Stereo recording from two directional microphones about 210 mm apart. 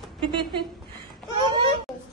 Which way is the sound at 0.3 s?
25° right (ahead or behind).